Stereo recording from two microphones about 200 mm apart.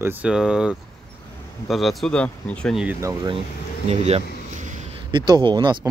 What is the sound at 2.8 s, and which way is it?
Speech, 15° right (ahead or behind).